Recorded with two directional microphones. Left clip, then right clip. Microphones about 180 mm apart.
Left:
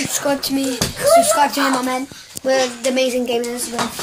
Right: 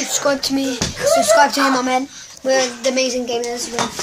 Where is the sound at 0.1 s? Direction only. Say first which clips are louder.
Right 4 dB; 15° right (ahead or behind).